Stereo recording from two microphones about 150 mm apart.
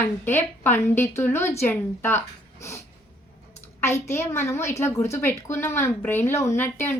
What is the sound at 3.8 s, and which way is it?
A woman's voice, 15° left (ahead or behind).